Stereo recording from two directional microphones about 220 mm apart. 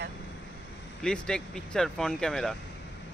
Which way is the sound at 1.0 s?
5° left (ahead or behind).